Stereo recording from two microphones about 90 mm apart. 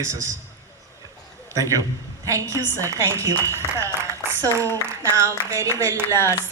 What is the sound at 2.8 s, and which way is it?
A woman's voice, 35° right (ahead or behind).